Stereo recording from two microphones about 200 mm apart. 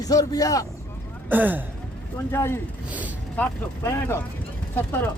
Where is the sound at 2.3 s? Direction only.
10° left (ahead or behind).